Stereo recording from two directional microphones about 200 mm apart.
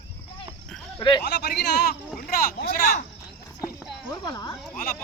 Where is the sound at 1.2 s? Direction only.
55° left (ahead or behind).